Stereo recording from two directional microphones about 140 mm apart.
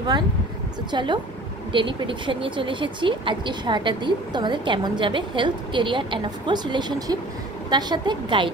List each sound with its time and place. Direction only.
0.9 s speech: 35° right (ahead or behind)